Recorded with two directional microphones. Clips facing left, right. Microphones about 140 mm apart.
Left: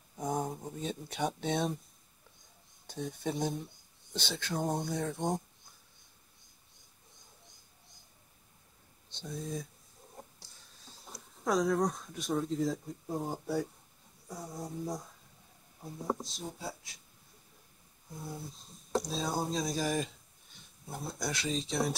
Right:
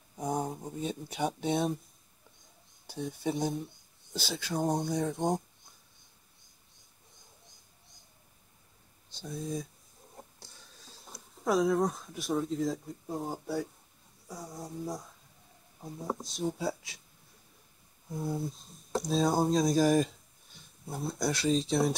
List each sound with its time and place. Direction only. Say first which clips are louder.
0.1 s a sound: right 1 dB; centre (ahead or behind)
0.5 s speech: right 2 dB; 10° right (ahead or behind)
2.9 s speech: right 3 dB; 5° right (ahead or behind)
9.1 s speech: right 3 dB; 5° right (ahead or behind)
11.1 s speech: right 2 dB; centre (ahead or behind)
16.1 s speech: right 3 dB; centre (ahead or behind)
18.9 s a sound: right 1 dB; centre (ahead or behind)
19.1 s speech: right 7 dB; 50° right (ahead or behind)
20.9 s speech: right 5 dB; centre (ahead or behind)